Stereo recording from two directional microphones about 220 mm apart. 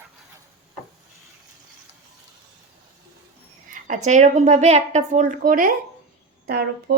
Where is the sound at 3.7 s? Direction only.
35° right (ahead or behind).